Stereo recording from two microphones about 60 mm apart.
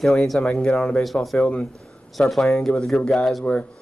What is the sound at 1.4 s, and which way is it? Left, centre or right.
Speech, centre.